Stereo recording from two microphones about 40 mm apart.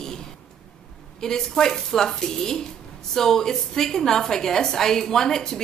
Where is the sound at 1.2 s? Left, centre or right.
Centre.